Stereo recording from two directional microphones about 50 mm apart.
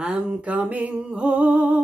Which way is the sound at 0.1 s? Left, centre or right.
Right.